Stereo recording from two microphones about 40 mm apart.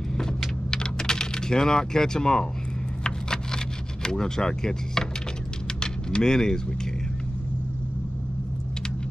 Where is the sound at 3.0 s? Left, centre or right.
Centre.